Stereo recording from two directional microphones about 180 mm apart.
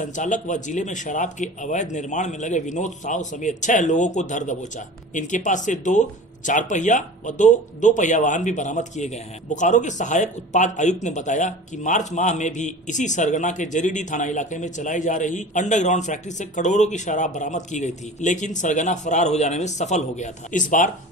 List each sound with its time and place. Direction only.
0.0 s a man's voice: 45° left (ahead or behind)